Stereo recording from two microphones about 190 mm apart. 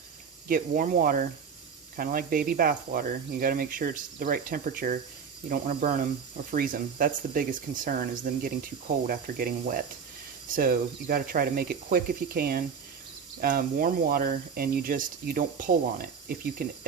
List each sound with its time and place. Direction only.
0.4 s speech: 45° right (ahead or behind)